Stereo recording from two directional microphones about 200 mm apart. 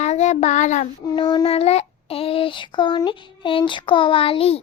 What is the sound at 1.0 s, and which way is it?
Child singing, 25° left (ahead or behind).